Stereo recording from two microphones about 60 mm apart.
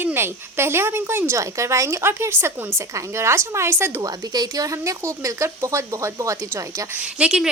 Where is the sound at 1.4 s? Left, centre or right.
Right.